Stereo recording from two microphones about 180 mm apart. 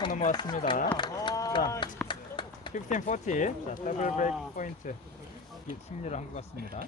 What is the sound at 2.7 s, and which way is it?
A man's voice, 45° left (ahead or behind).